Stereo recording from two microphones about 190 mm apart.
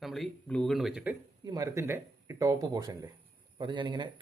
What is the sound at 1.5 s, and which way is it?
A man's voice, 15° right (ahead or behind).